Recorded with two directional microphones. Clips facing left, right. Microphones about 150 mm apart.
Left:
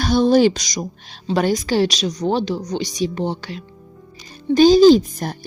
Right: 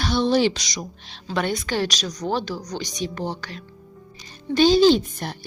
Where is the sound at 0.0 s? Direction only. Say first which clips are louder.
Left 6 dB; 45° left (ahead or behind); by 3.5 s 30° left (ahead or behind).